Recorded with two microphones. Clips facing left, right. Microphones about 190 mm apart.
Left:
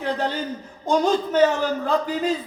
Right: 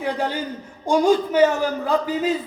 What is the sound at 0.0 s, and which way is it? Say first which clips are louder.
A man's voice: right 1 dB; 10° right (ahead or behind).